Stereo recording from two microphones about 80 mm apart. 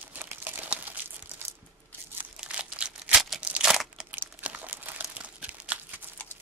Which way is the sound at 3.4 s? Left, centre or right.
Centre.